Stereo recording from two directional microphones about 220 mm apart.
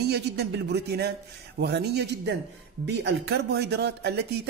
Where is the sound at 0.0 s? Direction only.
50° right (ahead or behind).